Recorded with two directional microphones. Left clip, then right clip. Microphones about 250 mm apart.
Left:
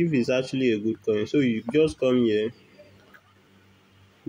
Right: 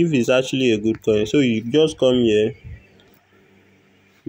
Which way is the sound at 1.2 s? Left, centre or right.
Centre.